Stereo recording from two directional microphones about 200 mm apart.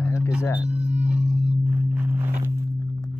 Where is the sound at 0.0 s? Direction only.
15° left (ahead or behind).